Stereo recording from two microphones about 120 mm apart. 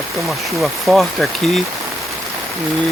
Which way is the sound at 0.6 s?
Centre (ahead or behind).